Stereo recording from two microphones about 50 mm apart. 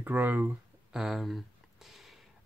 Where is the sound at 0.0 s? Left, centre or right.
Right.